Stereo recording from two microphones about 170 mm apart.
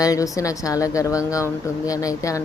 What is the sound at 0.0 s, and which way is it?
Speech, 20° left (ahead or behind).